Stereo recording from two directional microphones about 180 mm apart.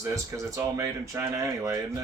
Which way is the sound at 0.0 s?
15° right (ahead or behind).